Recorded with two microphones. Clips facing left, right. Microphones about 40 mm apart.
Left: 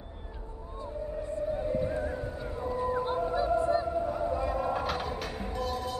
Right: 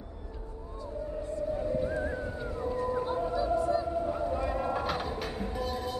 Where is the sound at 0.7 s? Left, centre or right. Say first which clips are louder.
Left 1 dB; left.